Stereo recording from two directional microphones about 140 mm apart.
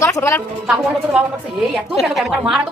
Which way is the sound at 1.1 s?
5° right (ahead or behind).